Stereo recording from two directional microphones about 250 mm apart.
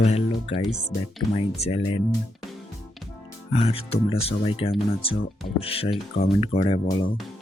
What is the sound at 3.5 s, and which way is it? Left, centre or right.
Speech, left.